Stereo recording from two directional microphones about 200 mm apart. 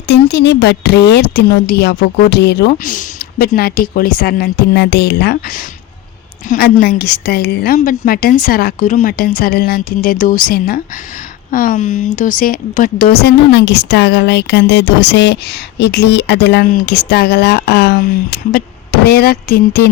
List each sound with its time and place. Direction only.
0.1 s a woman's voice: 55° left (ahead or behind)